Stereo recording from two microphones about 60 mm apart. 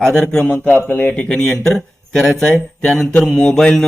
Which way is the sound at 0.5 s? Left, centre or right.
Left.